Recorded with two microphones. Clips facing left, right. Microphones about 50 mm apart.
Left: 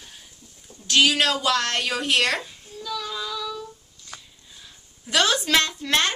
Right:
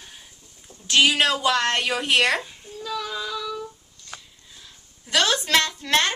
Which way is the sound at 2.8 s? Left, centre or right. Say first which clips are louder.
Right 1 dB; right.